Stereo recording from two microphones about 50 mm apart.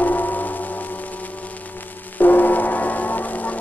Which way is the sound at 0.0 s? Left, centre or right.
Left.